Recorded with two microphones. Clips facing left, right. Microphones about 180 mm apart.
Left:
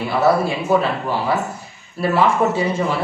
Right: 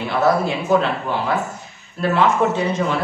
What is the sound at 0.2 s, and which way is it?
Speech, 5° left (ahead or behind).